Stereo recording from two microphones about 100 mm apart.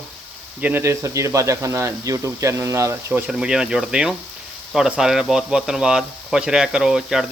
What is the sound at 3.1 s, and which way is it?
Speech, 10° right (ahead or behind).